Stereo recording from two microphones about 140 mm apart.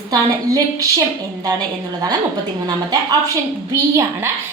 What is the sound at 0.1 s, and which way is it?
Speech, 25° right (ahead or behind).